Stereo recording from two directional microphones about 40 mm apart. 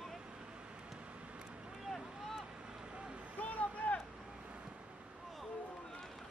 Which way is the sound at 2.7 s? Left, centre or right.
Right.